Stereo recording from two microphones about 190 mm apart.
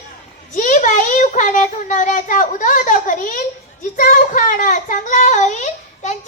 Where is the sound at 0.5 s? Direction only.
40° left (ahead or behind).